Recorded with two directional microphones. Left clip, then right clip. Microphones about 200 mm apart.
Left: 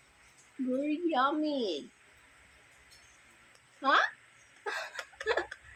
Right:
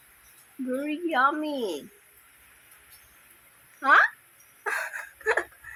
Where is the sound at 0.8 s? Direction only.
10° right (ahead or behind).